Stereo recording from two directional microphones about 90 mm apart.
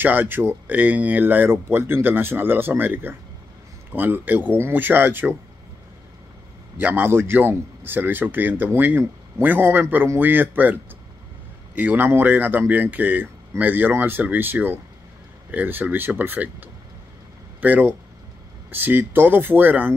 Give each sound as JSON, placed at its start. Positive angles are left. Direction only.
{"t": 0.0, "sound": "speech", "side_deg": -20}
{"t": 6.8, "sound": "speech", "side_deg": -20}